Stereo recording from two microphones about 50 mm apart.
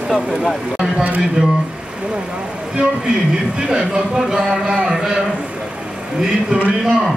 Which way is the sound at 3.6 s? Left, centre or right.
Centre.